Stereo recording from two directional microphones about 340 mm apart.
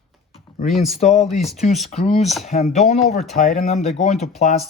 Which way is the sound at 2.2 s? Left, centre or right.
Centre.